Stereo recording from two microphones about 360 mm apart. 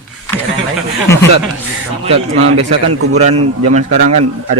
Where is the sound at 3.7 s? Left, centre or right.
Right.